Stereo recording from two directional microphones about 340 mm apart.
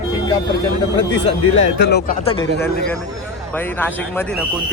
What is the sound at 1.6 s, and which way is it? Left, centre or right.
Speech, left.